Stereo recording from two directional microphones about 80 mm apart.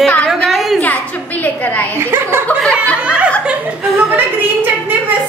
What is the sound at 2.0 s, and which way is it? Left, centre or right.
Chuckle, right.